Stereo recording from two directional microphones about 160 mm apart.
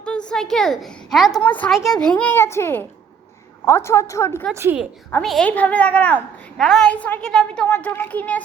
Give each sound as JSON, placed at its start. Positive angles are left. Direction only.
{"t": 0.0, "sound": "a woman's voice", "side_deg": 5}
{"t": 4.5, "sound": "a woman's voice", "side_deg": -15}
{"t": 5.2, "sound": "a child's voice", "side_deg": 5}